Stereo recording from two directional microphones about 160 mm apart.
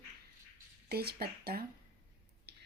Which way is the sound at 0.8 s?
75° right (ahead or behind).